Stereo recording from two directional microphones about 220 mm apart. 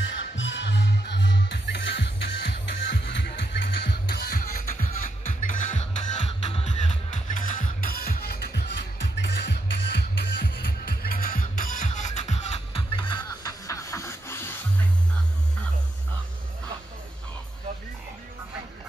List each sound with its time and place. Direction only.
0.0 s music: 55° left (ahead or behind); by 14.6 s 10° left (ahead or behind)